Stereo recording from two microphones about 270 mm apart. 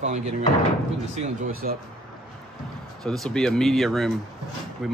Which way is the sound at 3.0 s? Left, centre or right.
Centre.